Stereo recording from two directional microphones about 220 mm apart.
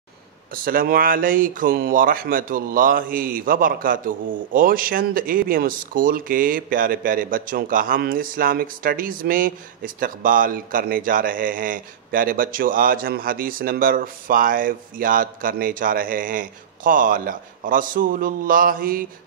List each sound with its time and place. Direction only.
0.5 s speech: 40° right (ahead or behind)